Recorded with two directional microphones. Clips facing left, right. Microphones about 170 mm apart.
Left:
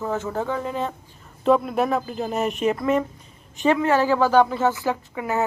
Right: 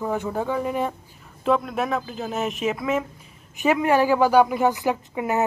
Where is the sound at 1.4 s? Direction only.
Centre (ahead or behind).